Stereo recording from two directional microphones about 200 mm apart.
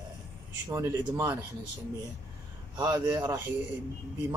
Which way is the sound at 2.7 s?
20° right (ahead or behind).